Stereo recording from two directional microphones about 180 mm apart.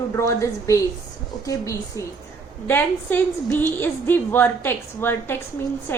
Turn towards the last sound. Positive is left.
turn(degrees=10)  # may be behind; listen again after turning